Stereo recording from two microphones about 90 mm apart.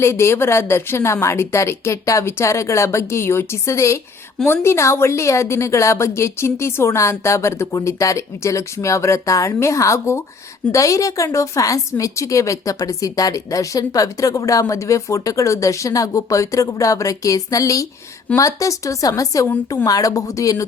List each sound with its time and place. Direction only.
0.0 s a woman's voice: 30° left (ahead or behind)